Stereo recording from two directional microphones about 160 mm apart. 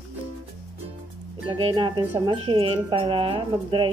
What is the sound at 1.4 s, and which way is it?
Speech, 35° right (ahead or behind).